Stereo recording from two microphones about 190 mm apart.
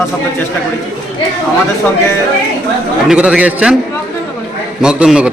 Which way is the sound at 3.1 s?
5° right (ahead or behind).